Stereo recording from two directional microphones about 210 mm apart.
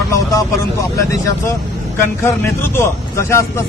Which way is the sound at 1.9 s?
10° left (ahead or behind).